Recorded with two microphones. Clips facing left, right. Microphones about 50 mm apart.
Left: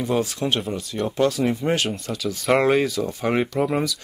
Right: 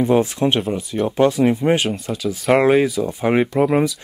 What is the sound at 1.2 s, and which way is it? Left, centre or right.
Speech, right.